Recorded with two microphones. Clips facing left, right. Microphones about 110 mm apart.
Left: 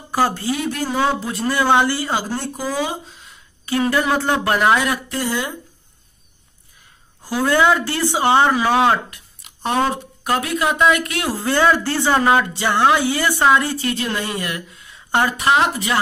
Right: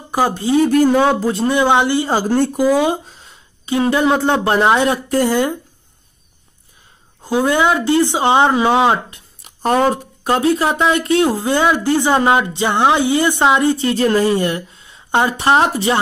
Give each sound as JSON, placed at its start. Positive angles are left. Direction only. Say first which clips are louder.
{"t": 0.1, "sound": "speech", "louder": "right 3 dB", "side_deg": -20}
{"t": 0.7, "sound": "speech", "louder": "right 11 dB", "side_deg": -50}
{"t": 1.2, "sound": "speech", "louder": "right 5 dB", "side_deg": -30}
{"t": 2.3, "sound": "speech", "louder": "right 10 dB", "side_deg": -55}
{"t": 3.2, "sound": "speech", "louder": "right 1 dB", "side_deg": -25}
{"t": 5.1, "sound": "speech", "louder": "right 8 dB", "side_deg": -50}
{"t": 7.2, "sound": "speech", "louder": "right 1 dB", "side_deg": -20}
{"t": 9.4, "sound": "a sound", "louder": "right 5 dB", "side_deg": -45}
{"t": 10.2, "sound": "speech", "louder": "right 5 dB", "side_deg": -30}
{"t": 15.4, "sound": "speech", "louder": "right 3 dB", "side_deg": -35}